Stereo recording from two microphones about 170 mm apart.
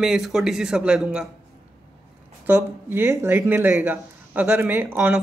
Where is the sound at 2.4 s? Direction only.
10° right (ahead or behind).